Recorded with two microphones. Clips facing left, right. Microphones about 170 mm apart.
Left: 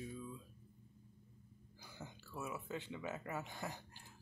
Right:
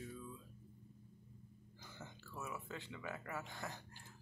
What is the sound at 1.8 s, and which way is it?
Speech, 15° left (ahead or behind).